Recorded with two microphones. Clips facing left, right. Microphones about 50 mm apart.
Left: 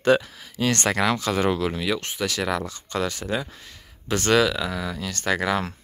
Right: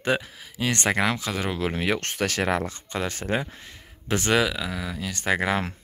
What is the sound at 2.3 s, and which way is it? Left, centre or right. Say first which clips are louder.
Speech: right 1 dB; right.